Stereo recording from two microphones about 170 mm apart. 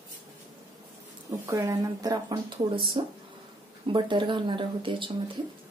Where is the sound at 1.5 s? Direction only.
15° right (ahead or behind).